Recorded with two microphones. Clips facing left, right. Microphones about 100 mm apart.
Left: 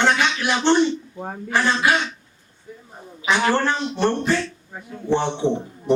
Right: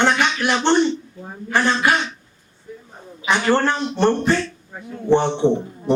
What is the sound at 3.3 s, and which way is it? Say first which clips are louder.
A man's voice: right 2 dB; 55° right (ahead or behind).